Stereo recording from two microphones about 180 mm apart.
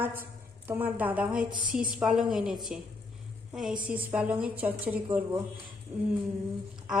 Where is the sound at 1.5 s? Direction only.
50° right (ahead or behind).